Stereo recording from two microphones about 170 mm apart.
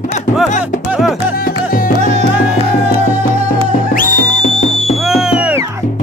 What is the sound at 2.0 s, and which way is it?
Music, 40° right (ahead or behind).